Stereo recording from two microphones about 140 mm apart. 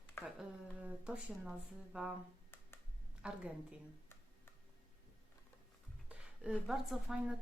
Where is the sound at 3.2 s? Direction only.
5° right (ahead or behind).